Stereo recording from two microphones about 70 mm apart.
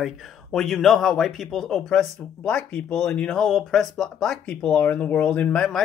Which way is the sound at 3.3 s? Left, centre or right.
Centre.